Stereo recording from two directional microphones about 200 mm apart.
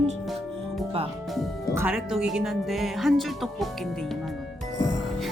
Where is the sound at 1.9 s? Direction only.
5° right (ahead or behind).